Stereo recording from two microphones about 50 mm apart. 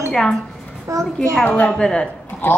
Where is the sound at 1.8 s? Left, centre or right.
Centre.